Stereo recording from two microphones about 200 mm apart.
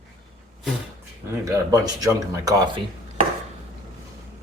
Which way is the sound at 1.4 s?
15° right (ahead or behind).